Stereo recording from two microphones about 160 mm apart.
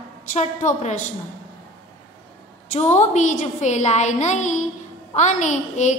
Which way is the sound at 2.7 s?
45° left (ahead or behind).